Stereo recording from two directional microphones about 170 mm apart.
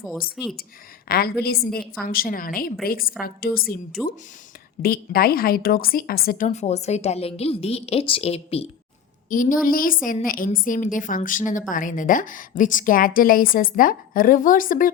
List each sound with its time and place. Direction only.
1.0 s a woman's voice: 65° left (ahead or behind)
4.0 s speech: centre (ahead or behind)
4.8 s a woman's voice: 60° left (ahead or behind); by 8.6 s 35° left (ahead or behind)
9.3 s a woman's voice: 50° left (ahead or behind)